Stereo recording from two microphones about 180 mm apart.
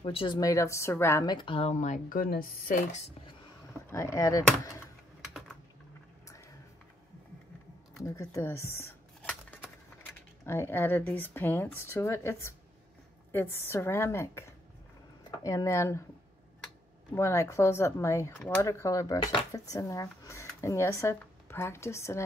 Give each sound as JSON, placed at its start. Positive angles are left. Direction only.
{"t": 0.0, "sound": "speech", "side_deg": 30}
{"t": 3.9, "sound": "speech", "side_deg": 15}
{"t": 8.0, "sound": "dishes", "side_deg": 15}
{"t": 10.4, "sound": "speech", "side_deg": 15}
{"t": 17.1, "sound": "speech", "side_deg": 15}